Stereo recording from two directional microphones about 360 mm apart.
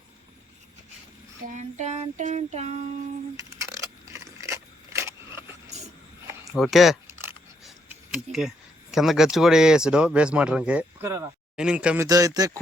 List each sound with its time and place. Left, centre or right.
1.5 s child singing: centre
4.1 s a sound: centre
8.1 s speech: centre